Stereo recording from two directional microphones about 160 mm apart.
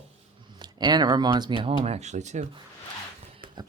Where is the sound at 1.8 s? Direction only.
45° right (ahead or behind).